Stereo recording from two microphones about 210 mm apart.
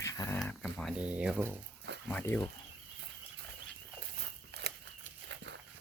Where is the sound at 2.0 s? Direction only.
10° left (ahead or behind).